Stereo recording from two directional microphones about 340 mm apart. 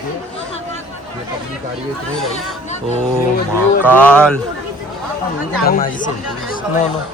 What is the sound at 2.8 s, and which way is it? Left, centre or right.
Speech, centre.